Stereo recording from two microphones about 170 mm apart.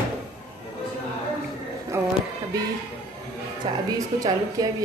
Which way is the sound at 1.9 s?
15° right (ahead or behind).